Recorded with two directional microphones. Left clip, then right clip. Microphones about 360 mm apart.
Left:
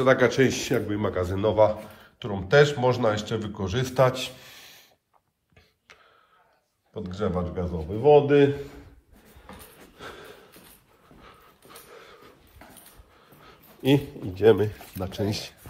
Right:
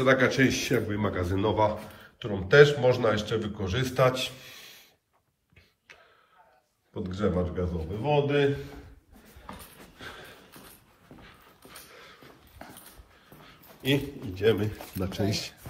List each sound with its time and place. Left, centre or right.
0.0 s speech: centre
7.0 s speech: centre
8.0 s a man's voice: centre
9.9 s a sound: centre
13.5 s speech: centre